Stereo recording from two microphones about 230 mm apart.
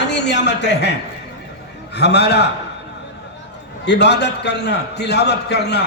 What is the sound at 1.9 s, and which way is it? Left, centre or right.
Speech, left.